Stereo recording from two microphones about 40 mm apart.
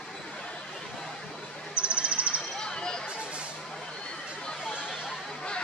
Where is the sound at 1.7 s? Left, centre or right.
Right.